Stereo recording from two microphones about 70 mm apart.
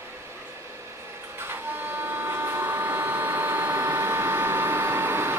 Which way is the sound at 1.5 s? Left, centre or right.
Right.